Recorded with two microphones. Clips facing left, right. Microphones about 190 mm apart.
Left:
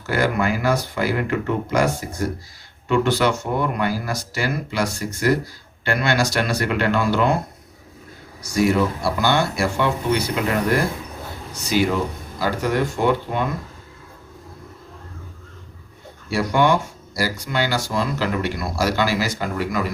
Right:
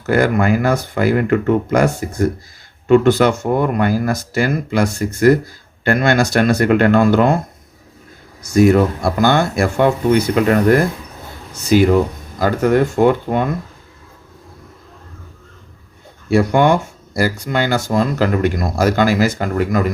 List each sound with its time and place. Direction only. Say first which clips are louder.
0.0 s speech: right 6 dB; 50° right (ahead or behind)
8.5 s speech: right 7 dB; 50° right (ahead or behind)
16.3 s speech: right 5 dB; 55° right (ahead or behind)